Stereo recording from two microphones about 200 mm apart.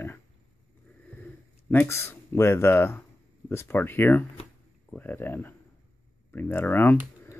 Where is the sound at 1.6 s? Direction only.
10° left (ahead or behind).